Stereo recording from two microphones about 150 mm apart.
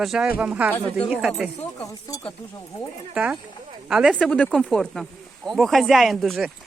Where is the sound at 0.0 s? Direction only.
Centre (ahead or behind).